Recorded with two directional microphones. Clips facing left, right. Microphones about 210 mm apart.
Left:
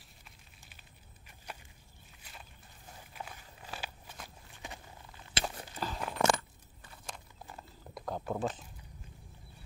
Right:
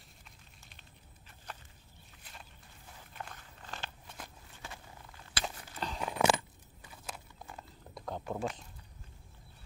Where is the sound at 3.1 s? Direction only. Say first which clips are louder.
Even; 10° left (ahead or behind).